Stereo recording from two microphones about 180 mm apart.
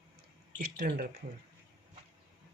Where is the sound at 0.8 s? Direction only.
55° right (ahead or behind).